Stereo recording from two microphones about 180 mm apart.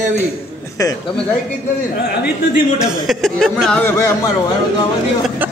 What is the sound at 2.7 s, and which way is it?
Speech, centre (ahead or behind).